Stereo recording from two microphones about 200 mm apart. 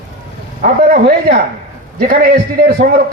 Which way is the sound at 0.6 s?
45° right (ahead or behind).